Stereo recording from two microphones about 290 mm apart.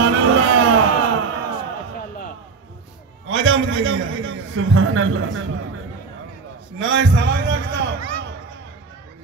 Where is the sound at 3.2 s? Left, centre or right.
Right.